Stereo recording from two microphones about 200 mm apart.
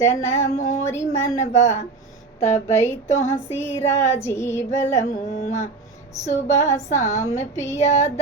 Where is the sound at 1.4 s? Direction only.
35° left (ahead or behind).